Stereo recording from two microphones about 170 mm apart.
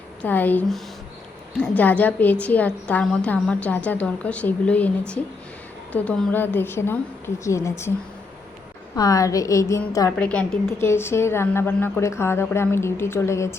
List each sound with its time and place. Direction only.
0.2 s a woman's voice: 10° left (ahead or behind)
9.0 s a woman's voice: 20° left (ahead or behind)
10.2 s a woman's voice: 5° left (ahead or behind)